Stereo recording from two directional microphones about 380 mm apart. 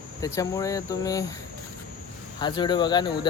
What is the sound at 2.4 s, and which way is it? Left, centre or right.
Speech, centre.